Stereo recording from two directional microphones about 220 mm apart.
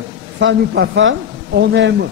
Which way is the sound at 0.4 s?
55° right (ahead or behind).